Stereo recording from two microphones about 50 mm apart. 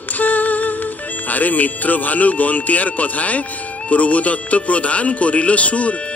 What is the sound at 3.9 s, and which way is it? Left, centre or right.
Speech, left.